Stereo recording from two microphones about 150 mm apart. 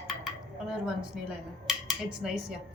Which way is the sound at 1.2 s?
5° right (ahead or behind).